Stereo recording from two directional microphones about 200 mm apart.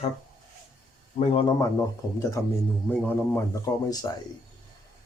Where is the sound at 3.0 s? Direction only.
15° left (ahead or behind).